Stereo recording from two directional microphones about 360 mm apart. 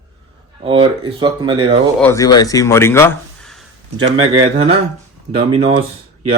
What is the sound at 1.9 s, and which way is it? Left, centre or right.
Speech, centre.